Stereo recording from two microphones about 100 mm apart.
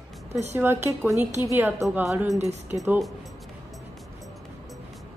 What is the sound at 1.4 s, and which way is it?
Speech, 25° right (ahead or behind).